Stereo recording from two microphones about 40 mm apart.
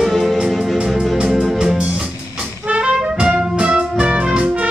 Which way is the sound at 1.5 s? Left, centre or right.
Right.